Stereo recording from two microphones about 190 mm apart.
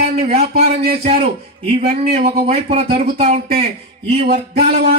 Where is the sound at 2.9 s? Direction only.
55° right (ahead or behind).